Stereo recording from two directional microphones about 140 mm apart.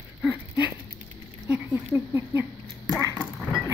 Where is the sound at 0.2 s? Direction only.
10° right (ahead or behind).